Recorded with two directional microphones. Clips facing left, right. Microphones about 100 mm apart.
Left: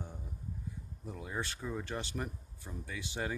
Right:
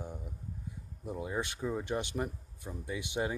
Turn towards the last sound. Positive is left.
turn(degrees=-20)  # may be behind; listen again after turning